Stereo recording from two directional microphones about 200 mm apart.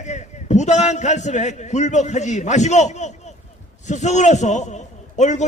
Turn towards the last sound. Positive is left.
turn(degrees=35)  # may be behind; listen again after turning